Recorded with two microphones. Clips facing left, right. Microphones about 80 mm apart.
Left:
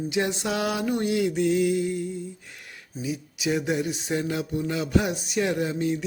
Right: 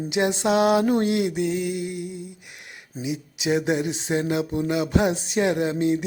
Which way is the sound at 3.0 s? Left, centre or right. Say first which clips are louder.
Right 2 dB; right.